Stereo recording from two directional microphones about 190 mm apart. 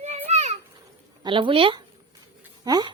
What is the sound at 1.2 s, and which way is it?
A woman's voice, 25° right (ahead or behind).